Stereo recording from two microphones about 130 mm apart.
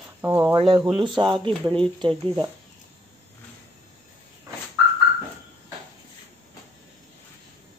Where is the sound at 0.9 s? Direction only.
35° right (ahead or behind).